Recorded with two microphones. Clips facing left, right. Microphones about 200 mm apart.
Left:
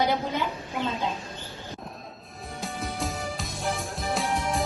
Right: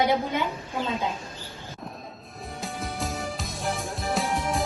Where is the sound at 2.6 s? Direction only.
Centre (ahead or behind).